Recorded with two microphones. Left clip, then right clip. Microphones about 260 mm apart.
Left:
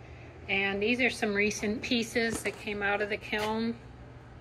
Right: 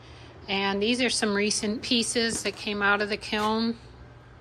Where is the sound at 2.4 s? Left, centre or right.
Centre.